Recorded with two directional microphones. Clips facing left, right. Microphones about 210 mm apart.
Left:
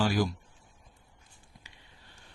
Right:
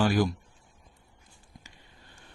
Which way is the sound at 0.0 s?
55° right (ahead or behind).